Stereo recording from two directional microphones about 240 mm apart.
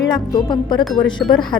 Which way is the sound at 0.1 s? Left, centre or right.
Centre.